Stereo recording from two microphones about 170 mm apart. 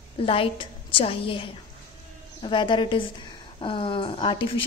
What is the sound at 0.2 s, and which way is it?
A woman's voice, 30° left (ahead or behind).